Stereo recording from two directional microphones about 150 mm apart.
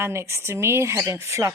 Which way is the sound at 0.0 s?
15° right (ahead or behind).